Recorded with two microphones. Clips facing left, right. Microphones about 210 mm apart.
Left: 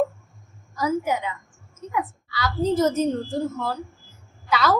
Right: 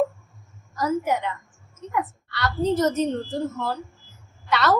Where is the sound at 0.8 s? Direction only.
Centre (ahead or behind).